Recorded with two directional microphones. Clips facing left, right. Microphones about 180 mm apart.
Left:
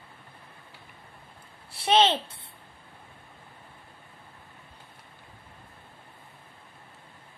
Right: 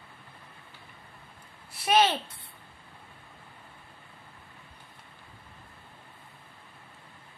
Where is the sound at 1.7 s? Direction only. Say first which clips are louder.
Left 2 dB; 30° left (ahead or behind).